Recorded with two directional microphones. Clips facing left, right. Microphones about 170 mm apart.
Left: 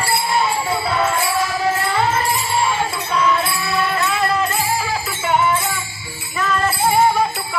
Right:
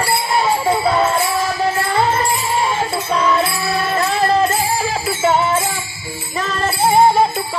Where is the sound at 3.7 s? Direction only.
40° right (ahead or behind).